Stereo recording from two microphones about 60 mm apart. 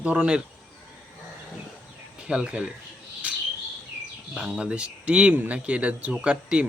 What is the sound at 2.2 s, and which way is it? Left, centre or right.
Speech, centre.